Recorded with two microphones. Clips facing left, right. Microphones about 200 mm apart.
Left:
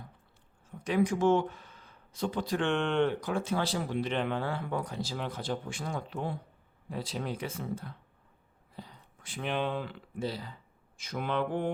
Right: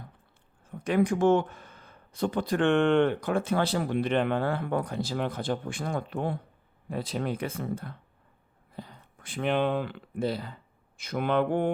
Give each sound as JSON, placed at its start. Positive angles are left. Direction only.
{"t": 0.7, "sound": "speech", "side_deg": -55}